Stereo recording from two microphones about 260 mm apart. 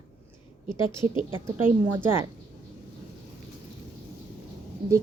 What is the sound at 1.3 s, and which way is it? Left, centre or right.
Speech, centre.